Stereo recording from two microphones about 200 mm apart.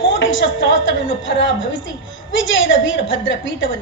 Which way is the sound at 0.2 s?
70° left (ahead or behind).